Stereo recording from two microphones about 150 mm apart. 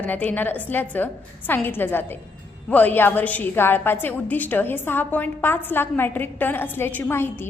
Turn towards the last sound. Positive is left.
turn(degrees=15)  # may be behind; listen again after turning